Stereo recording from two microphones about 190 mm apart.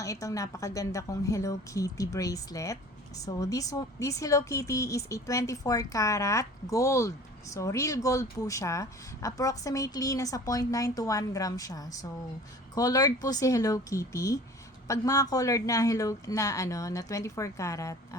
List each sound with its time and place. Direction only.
0.0 s speech: 15° left (ahead or behind)